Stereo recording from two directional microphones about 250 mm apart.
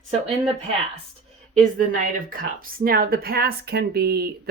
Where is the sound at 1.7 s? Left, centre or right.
Right.